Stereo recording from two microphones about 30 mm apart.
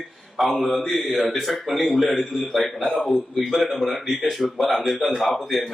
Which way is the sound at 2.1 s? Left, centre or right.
Centre.